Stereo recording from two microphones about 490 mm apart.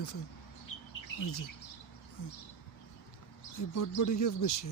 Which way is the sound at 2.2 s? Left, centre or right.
Left.